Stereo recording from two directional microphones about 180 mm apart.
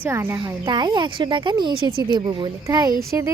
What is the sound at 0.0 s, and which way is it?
Speech, 10° right (ahead or behind).